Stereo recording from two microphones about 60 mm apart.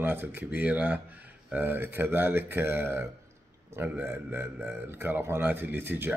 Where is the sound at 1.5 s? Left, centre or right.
Right.